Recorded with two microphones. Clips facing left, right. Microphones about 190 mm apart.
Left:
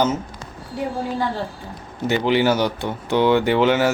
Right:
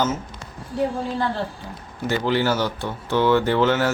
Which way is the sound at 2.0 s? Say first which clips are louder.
Left 3 dB; 20° left (ahead or behind).